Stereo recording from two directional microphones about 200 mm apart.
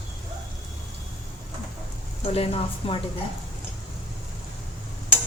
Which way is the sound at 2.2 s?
30° left (ahead or behind).